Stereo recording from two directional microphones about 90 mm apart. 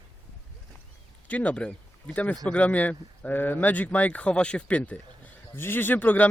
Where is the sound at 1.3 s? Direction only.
15° left (ahead or behind).